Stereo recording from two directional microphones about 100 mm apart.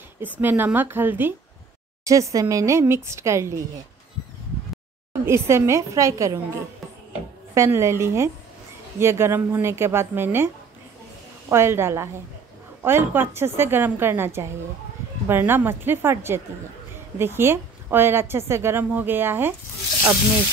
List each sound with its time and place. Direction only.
0.2 s a woman's voice: 20° right (ahead or behind)
2.0 s speech: 30° right (ahead or behind)
5.1 s a woman's voice: 25° right (ahead or behind)